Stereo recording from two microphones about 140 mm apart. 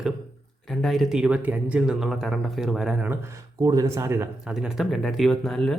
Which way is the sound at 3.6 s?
25° right (ahead or behind).